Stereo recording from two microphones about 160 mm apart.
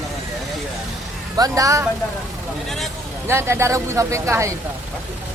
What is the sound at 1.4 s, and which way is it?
Speech, 20° right (ahead or behind).